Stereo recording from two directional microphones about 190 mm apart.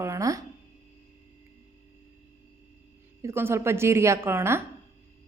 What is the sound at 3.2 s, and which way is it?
A woman's voice, 15° right (ahead or behind).